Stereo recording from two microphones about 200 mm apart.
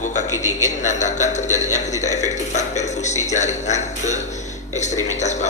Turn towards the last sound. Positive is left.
turn(degrees=35)  # may be behind; listen again after turning